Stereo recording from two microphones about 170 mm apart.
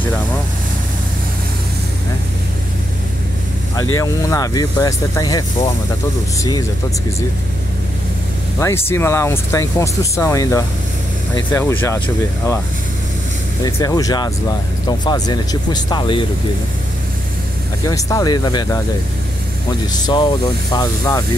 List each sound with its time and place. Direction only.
3.7 s speech: 20° left (ahead or behind)
8.5 s speech: 15° left (ahead or behind)
13.7 s speech: 20° left (ahead or behind)
17.8 s speech: 20° left (ahead or behind)
19.9 s speech: 25° left (ahead or behind)